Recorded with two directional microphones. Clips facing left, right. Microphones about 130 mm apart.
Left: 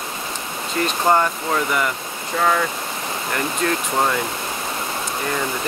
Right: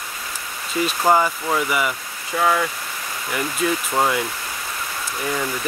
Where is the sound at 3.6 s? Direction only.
5° right (ahead or behind).